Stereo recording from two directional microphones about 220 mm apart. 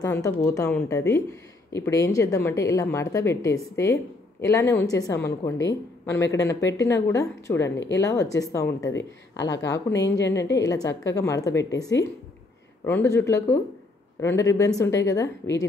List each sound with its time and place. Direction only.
0.0 s a woman's voice: 15° left (ahead or behind)
10.4 s a woman's voice: 55° left (ahead or behind)
10.7 s a woman's voice: 15° left (ahead or behind)